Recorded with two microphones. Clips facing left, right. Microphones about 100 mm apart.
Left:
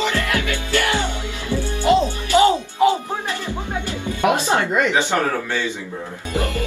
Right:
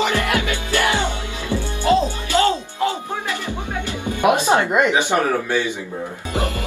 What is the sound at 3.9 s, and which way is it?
Music, 20° right (ahead or behind).